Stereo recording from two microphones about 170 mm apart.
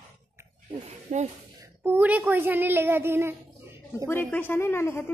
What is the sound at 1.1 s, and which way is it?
Speech, 45° right (ahead or behind).